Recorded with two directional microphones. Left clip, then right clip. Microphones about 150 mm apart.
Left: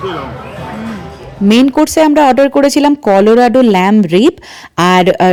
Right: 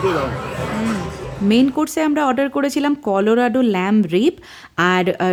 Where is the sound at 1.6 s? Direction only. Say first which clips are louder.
Left 12 dB; 40° left (ahead or behind).